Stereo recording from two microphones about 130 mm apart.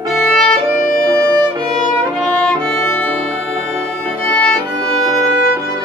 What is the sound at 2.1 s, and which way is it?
Music, 5° left (ahead or behind).